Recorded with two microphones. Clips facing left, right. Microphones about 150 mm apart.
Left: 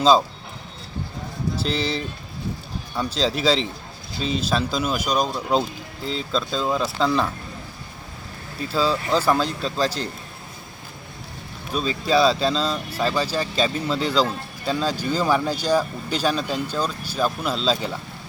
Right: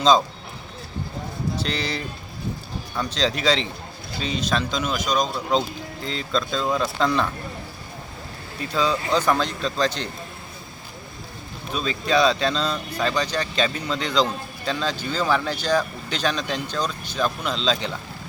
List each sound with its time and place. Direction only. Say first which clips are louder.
1.6 s speech: left 3 dB; centre (ahead or behind)
8.7 s speech: left 1 dB; 5° left (ahead or behind)
11.7 s speech: left 2 dB; 5° left (ahead or behind)